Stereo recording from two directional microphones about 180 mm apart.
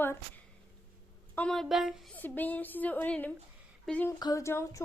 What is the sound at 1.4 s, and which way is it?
Speech, centre (ahead or behind).